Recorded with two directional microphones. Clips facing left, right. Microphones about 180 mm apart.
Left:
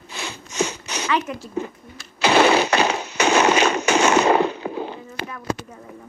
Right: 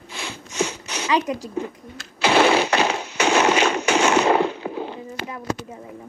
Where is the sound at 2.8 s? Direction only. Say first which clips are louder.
Left 1 dB; 40° left (ahead or behind).